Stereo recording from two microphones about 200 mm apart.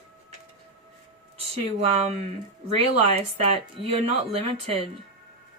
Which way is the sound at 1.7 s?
35° right (ahead or behind).